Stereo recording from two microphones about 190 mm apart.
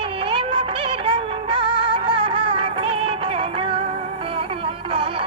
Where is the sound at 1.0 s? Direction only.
25° right (ahead or behind).